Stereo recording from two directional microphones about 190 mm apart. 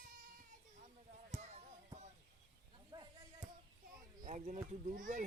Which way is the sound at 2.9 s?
20° right (ahead or behind).